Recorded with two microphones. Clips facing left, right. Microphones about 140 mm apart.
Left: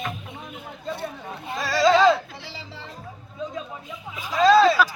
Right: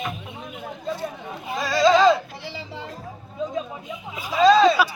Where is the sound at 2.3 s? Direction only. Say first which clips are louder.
Right 4 dB; 15° right (ahead or behind).